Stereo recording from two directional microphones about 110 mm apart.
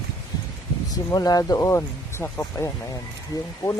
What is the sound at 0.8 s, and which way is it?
Speech, 35° left (ahead or behind).